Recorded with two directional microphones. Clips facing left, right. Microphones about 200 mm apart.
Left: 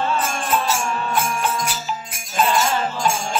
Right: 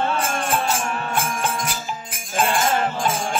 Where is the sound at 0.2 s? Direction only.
50° right (ahead or behind).